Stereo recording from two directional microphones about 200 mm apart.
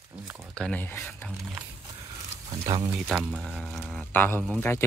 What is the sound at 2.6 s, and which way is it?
Speech, 20° right (ahead or behind).